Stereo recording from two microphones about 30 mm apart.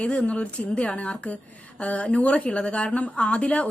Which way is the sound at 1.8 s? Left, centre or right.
Left.